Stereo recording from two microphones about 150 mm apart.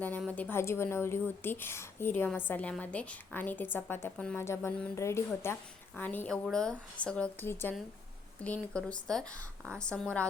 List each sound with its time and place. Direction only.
0.2 s a woman's voice: 10° left (ahead or behind)